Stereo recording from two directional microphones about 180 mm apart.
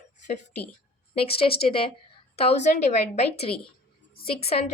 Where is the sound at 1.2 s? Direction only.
30° left (ahead or behind).